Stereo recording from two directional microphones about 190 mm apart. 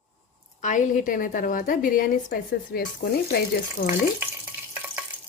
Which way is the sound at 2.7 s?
55° left (ahead or behind).